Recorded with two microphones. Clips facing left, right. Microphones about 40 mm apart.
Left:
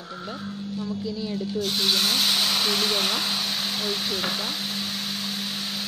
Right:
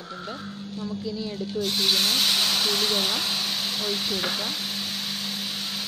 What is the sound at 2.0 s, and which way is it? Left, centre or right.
Speech, centre.